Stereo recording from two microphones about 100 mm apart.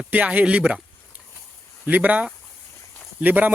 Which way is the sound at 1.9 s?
15° right (ahead or behind).